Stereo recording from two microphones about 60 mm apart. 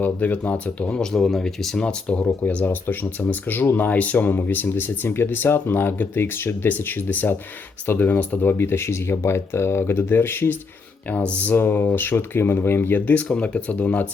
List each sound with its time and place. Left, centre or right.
0.0 s speech: left
1.1 s speech: centre
1.8 s speech: centre
2.6 s speech: left
11.1 s speech: left
11.5 s speech: left